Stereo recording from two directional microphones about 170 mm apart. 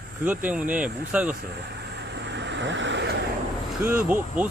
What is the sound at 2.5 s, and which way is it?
Vehicle, 90° right.